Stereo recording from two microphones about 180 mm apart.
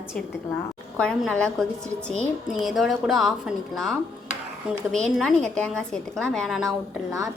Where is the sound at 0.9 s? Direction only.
5° left (ahead or behind).